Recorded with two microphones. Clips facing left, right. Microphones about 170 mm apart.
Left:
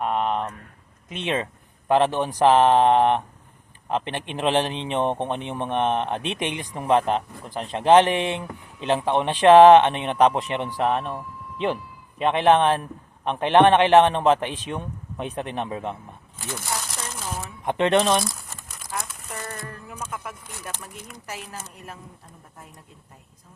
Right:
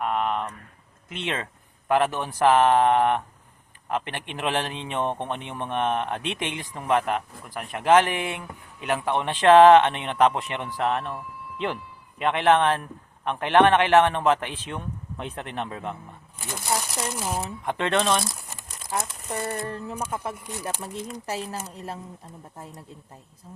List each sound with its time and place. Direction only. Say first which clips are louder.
0.0 s a sound: left 2 dB; 20° left (ahead or behind)
1.1 s speech: left 4 dB; 15° left (ahead or behind)
16.4 s a sound: right 2 dB; 20° right (ahead or behind)
17.7 s speech: left 4 dB; 20° left (ahead or behind)
18.3 s crumpling: left 1 dB; 25° right (ahead or behind)
18.9 s a woman's voice: right 4 dB; 30° right (ahead or behind)